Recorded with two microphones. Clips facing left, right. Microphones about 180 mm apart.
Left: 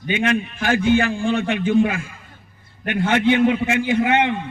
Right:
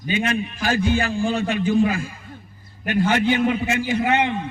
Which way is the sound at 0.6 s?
35° right (ahead or behind).